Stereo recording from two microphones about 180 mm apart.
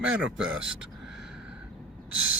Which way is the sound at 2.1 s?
10° right (ahead or behind).